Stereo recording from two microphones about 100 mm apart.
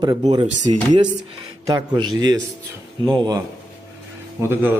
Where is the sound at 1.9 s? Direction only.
40° right (ahead or behind).